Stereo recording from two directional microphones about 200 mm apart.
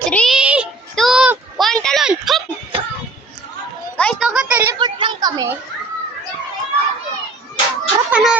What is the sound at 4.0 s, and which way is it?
Speech, 5° left (ahead or behind).